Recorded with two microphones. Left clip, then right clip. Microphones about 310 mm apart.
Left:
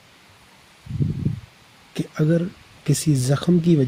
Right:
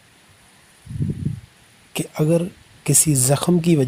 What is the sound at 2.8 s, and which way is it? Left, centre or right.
Speech, right.